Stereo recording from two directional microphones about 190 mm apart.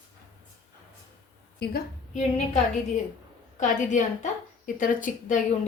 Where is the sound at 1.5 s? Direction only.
60° left (ahead or behind).